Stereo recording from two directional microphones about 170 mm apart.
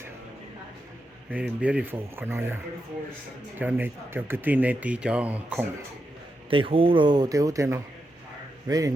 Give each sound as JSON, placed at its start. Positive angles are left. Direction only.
{"t": 1.3, "sound": "speech", "side_deg": -10}
{"t": 3.6, "sound": "speech", "side_deg": -10}
{"t": 6.5, "sound": "speech", "side_deg": -30}